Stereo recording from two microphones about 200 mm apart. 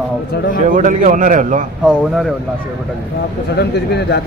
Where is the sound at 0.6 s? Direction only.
40° right (ahead or behind).